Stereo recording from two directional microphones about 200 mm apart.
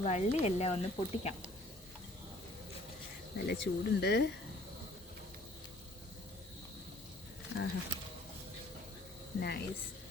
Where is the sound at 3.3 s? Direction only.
55° left (ahead or behind).